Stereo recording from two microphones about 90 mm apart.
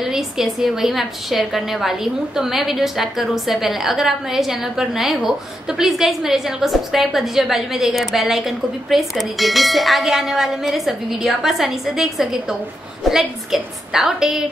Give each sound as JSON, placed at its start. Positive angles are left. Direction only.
{"t": 0.0, "sound": "a woman's voice", "side_deg": -5}